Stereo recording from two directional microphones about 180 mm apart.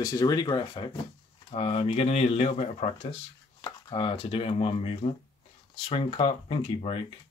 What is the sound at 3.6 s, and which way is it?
Speech, 25° left (ahead or behind).